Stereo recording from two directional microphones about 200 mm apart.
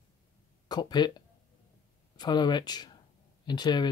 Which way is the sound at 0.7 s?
20° left (ahead or behind).